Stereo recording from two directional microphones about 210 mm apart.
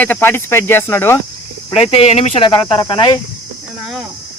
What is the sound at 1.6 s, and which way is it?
Speech, 25° left (ahead or behind).